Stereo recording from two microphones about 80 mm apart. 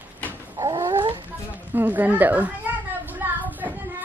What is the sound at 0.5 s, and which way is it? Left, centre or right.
Cat, right.